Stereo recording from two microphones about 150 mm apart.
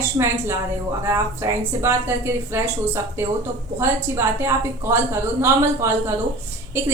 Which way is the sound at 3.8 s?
20° right (ahead or behind).